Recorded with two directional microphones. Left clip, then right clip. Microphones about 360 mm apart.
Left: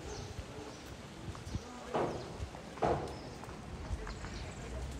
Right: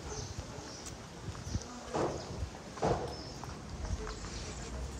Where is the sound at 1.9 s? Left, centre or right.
Left.